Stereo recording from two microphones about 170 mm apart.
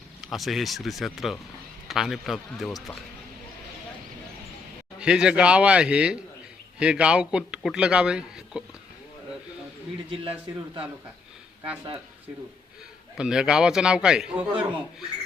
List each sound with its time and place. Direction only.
0.2 s a man's voice: centre (ahead or behind)
4.9 s a man's voice: 5° right (ahead or behind)
13.1 s a man's voice: 5° right (ahead or behind)